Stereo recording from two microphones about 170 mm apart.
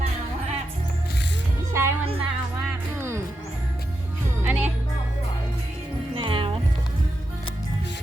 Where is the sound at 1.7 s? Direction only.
15° right (ahead or behind).